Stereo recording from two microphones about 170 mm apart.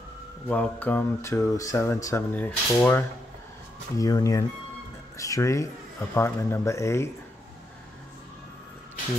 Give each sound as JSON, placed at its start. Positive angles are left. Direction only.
{"t": 0.5, "sound": "speech", "side_deg": 10}
{"t": 4.0, "sound": "speech", "side_deg": 20}